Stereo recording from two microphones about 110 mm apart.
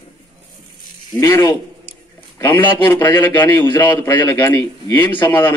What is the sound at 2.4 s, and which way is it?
A man's voice, 20° left (ahead or behind).